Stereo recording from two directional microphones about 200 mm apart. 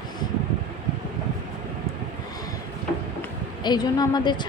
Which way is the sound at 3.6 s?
20° left (ahead or behind).